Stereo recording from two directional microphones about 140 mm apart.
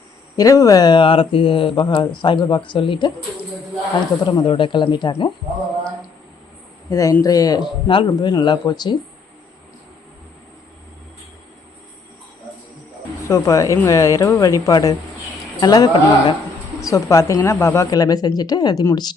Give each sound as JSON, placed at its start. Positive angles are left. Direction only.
{"t": 0.3, "sound": "speech", "side_deg": 25}
{"t": 4.2, "sound": "speech", "side_deg": 35}
{"t": 6.9, "sound": "speech", "side_deg": 25}
{"t": 13.2, "sound": "speech", "side_deg": 20}